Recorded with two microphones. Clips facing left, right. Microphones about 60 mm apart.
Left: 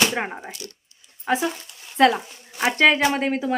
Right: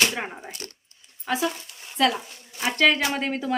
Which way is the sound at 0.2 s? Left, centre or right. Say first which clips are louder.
Left 4 dB; left.